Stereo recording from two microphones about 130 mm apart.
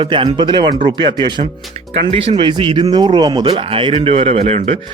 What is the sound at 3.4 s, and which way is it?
Speech, 45° right (ahead or behind).